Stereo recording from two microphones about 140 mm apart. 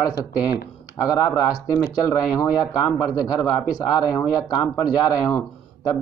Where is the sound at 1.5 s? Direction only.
25° left (ahead or behind).